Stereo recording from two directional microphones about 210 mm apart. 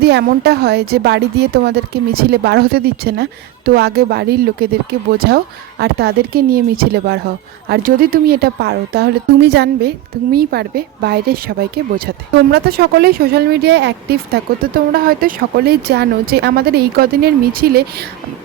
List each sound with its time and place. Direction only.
0.0 s speech: 50° right (ahead or behind)